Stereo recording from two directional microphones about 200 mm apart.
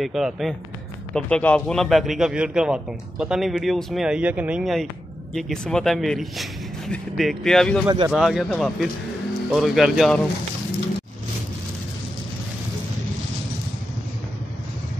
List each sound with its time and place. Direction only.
0.0 s a man's voice: centre (ahead or behind)
7.8 s speech: 20° right (ahead or behind)
8.1 s a man's voice: centre (ahead or behind)